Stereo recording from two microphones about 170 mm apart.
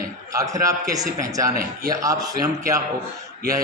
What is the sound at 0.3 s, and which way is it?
A man's voice, 20° right (ahead or behind).